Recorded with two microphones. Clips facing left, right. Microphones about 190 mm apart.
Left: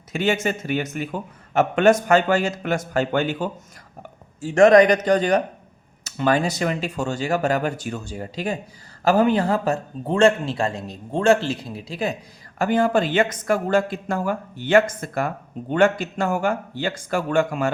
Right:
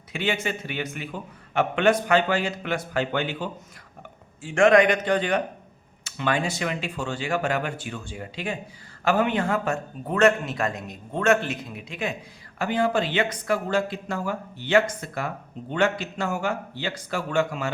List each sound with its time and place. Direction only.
0.1 s a man's voice: 45° left (ahead or behind)
12.5 s a man's voice: 45° left (ahead or behind)